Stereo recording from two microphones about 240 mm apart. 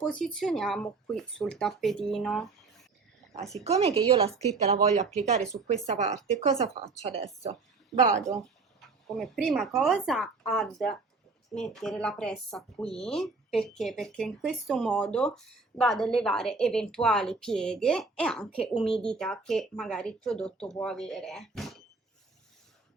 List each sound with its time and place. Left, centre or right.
0.0 s speech: centre
3.6 s speech: right
9.1 s speech: centre